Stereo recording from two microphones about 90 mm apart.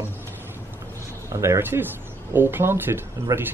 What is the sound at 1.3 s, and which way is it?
Speech, 30° right (ahead or behind).